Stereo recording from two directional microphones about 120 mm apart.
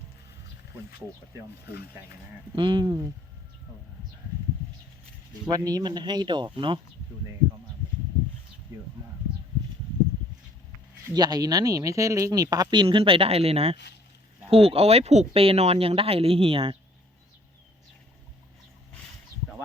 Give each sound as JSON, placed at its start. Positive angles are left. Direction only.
{"t": 2.6, "sound": "speech", "side_deg": -40}
{"t": 5.5, "sound": "speech", "side_deg": -30}
{"t": 8.7, "sound": "speech", "side_deg": -30}
{"t": 11.1, "sound": "speech", "side_deg": -35}